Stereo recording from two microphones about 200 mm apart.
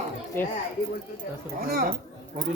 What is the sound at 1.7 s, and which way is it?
Speech, 50° right (ahead or behind).